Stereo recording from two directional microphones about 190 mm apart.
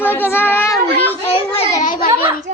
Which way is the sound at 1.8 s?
45° left (ahead or behind).